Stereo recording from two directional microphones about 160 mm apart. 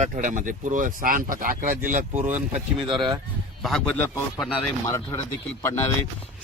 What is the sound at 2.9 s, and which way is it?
Speech, 30° right (ahead or behind).